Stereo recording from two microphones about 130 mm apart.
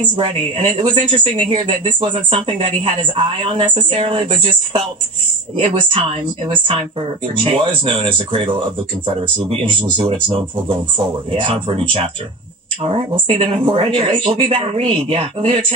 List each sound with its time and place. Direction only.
0.1 s a woman's voice: 45° right (ahead or behind)
13.3 s a woman's voice: 45° right (ahead or behind)